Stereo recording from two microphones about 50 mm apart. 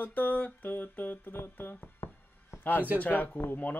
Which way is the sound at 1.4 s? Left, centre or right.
Left.